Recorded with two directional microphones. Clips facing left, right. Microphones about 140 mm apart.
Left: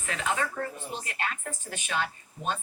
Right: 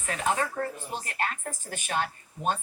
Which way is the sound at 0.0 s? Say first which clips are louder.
Right 2 dB; 40° right (ahead or behind).